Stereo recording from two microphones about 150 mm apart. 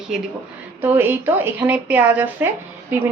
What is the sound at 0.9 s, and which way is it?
A woman's voice, 15° right (ahead or behind).